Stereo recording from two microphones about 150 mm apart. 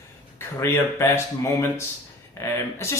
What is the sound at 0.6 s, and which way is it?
Speech, 20° left (ahead or behind).